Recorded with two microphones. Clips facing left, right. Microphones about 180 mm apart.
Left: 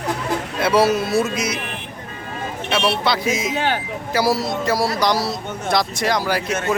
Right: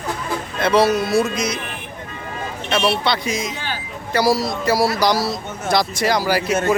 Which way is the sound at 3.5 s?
60° left (ahead or behind).